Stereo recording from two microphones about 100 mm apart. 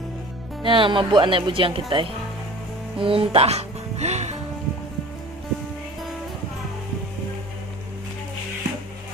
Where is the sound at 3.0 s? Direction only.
65° right (ahead or behind); by 4.4 s 90° right.